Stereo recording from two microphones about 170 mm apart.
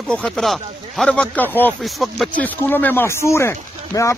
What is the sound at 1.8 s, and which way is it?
Speech, centre (ahead or behind).